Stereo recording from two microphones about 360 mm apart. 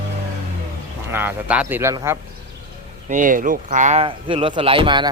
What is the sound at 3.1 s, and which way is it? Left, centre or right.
Speech, right.